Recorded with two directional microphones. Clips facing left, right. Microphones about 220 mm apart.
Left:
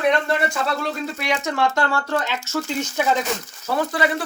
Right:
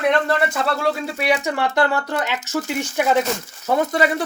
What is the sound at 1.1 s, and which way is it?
Speech, 15° right (ahead or behind).